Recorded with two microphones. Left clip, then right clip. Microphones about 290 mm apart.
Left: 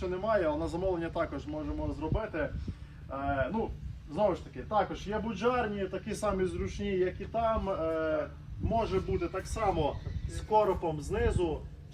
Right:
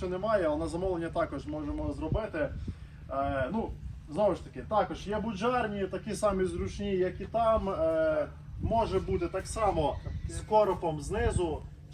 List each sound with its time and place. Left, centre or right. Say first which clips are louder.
0.0 s a man's voice: right 1 dB; centre